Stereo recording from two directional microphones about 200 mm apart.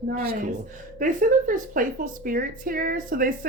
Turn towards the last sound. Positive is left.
turn(degrees=-45)  # may be behind; listen again after turning